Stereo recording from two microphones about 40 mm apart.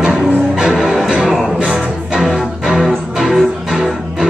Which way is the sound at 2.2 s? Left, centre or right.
Centre.